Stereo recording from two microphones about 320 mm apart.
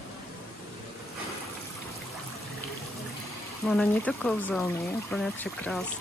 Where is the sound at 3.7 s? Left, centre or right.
Centre.